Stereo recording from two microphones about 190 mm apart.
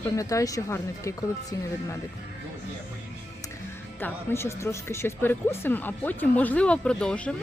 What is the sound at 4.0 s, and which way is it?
Speech, 10° left (ahead or behind).